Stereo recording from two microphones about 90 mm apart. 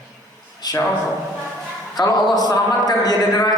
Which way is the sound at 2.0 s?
45° left (ahead or behind).